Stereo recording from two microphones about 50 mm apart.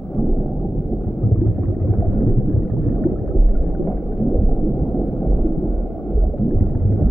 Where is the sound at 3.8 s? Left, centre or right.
Centre.